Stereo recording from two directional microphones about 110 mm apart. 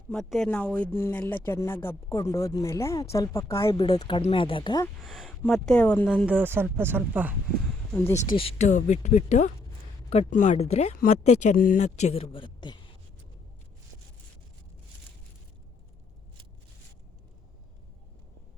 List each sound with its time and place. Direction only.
0.1 s speech: 5° left (ahead or behind); by 3.8 s 25° left (ahead or behind)
3.8 s speech: 35° left (ahead or behind)
4.3 s speech: 50° left (ahead or behind)
5.0 s speech: centre (ahead or behind)
6.2 s speech: 15° right (ahead or behind)
8.4 s speech: 75° left (ahead or behind)
10.1 s speech: 75° left (ahead or behind); by 12.8 s 45° left (ahead or behind)